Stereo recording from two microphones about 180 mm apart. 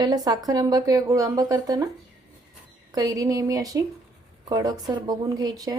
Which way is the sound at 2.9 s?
20° right (ahead or behind).